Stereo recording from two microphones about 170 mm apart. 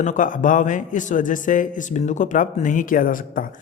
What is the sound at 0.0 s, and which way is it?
A man's voice, 50° left (ahead or behind).